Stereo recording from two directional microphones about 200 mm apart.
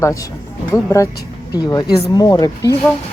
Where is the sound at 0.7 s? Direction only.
15° left (ahead or behind).